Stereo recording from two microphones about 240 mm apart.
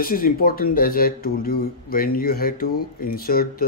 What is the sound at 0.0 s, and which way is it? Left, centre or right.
Speech, left.